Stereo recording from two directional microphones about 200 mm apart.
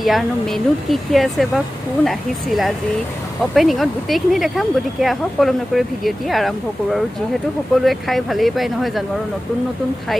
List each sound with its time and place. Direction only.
0.0 s speech: centre (ahead or behind)